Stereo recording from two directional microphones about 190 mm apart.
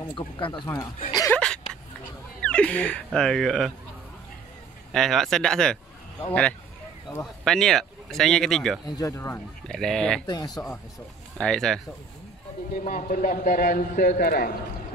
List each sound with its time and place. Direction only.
0.1 s speech: 25° left (ahead or behind)
1.1 s a sound: 15° left (ahead or behind)
2.4 s speech: 5° left (ahead or behind)
4.9 s speech: centre (ahead or behind)
7.4 s speech: centre (ahead or behind)
8.9 s speech: 15° left (ahead or behind)
9.7 s speech: 5° left (ahead or behind)
10.2 s speech: 20° left (ahead or behind)
11.3 s speech: 5° left (ahead or behind)
12.7 s a man's voice: 45° left (ahead or behind)